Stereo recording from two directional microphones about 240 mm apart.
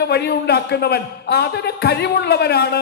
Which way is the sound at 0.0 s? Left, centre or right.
Left.